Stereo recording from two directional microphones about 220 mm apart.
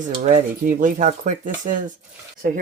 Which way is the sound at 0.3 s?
35° right (ahead or behind).